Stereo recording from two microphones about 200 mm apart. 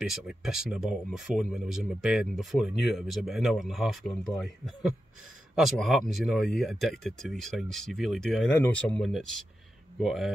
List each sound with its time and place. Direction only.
0.0 s speech: centre (ahead or behind)